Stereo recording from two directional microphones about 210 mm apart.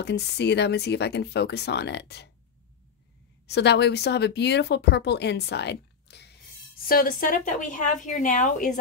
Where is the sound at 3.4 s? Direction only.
55° left (ahead or behind).